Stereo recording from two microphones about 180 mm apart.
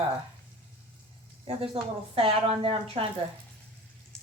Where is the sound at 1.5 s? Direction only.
30° right (ahead or behind).